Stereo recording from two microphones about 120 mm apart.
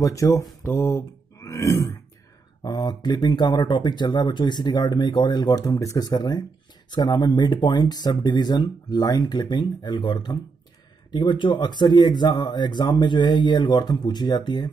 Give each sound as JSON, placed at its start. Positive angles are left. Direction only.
{"t": 0.0, "sound": "speech", "side_deg": 25}